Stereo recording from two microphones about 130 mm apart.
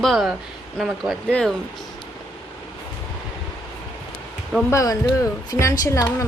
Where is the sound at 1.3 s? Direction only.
5° left (ahead or behind).